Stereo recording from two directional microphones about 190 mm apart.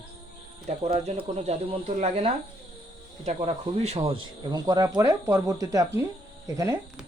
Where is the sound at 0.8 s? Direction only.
30° right (ahead or behind).